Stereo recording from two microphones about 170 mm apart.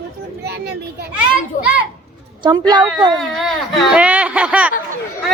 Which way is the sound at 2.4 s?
25° right (ahead or behind).